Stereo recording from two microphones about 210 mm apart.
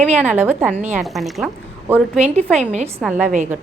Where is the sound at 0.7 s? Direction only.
35° right (ahead or behind).